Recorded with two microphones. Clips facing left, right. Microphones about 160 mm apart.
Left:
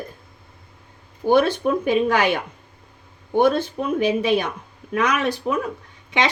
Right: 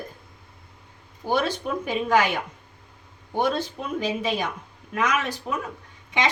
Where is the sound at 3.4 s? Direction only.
60° left (ahead or behind).